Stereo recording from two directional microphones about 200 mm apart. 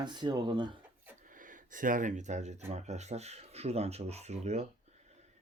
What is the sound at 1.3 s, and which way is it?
Speech, 40° right (ahead or behind).